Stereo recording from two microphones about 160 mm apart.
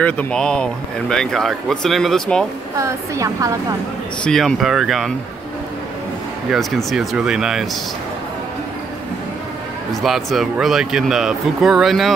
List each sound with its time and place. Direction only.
0.0 s speech: 5° left (ahead or behind)
2.8 s speech: 20° right (ahead or behind)
4.2 s speech: 5° left (ahead or behind)
6.5 s speech: centre (ahead or behind)
10.0 s speech: centre (ahead or behind)